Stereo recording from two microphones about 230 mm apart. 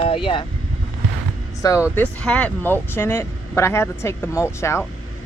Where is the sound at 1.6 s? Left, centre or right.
Centre.